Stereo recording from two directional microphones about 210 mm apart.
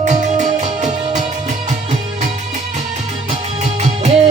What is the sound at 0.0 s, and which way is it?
Music, 35° right (ahead or behind).